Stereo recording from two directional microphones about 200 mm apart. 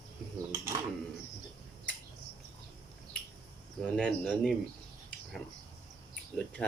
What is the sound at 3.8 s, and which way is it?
Speech, 5° left (ahead or behind).